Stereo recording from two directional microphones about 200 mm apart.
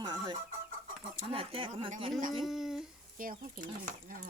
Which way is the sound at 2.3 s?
Centre (ahead or behind).